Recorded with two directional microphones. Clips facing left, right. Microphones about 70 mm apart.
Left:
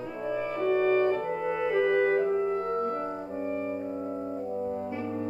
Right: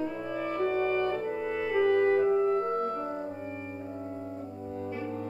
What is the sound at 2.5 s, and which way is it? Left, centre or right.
Clarinet, centre.